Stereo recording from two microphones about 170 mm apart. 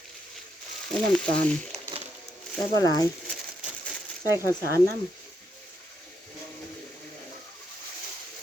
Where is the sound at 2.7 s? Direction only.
20° left (ahead or behind).